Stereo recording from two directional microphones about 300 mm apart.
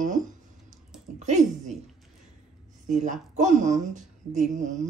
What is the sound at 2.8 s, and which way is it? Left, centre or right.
A woman's voice, right.